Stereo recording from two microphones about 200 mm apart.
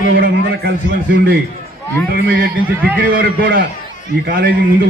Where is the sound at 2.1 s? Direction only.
50° right (ahead or behind).